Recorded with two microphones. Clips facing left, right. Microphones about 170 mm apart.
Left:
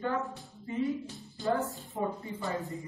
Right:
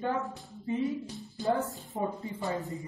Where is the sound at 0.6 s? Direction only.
20° right (ahead or behind).